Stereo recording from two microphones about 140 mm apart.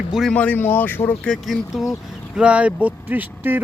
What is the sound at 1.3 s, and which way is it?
Speech, centre (ahead or behind).